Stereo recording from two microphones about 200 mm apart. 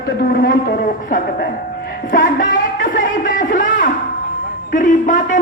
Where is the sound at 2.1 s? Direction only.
45° left (ahead or behind).